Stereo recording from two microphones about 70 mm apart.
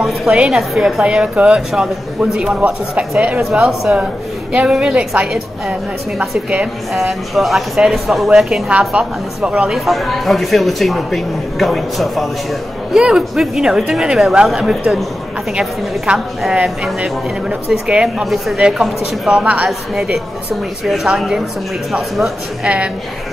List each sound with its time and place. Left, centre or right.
0.5 s a woman's voice: centre
1.0 s a man's voice: centre
6.9 s a woman's voice: centre
16.1 s a man's voice: centre
16.6 s a woman's voice: centre
18.2 s a woman's voice: centre
19.4 s speech: right
20.8 s a woman's voice: centre